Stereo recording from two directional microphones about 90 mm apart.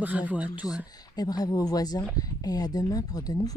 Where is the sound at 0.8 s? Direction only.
45° left (ahead or behind).